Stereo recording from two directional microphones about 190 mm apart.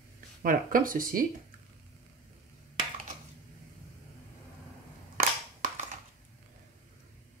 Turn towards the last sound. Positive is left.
turn(degrees=-45)  # may be behind; listen again after turning